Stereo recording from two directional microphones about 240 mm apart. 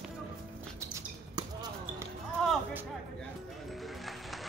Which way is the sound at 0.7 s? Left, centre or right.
Centre.